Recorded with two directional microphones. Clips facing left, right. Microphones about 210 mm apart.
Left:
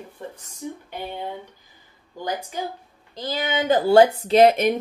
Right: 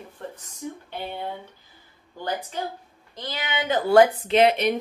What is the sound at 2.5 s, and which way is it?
Speech, 10° left (ahead or behind).